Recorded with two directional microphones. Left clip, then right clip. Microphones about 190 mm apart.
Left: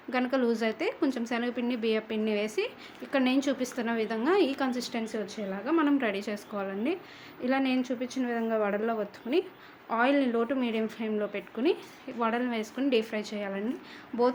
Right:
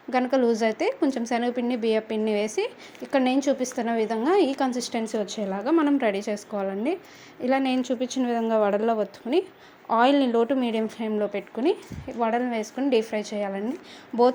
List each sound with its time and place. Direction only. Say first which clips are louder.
0.1 s a woman's voice: right 6 dB; 20° right (ahead or behind)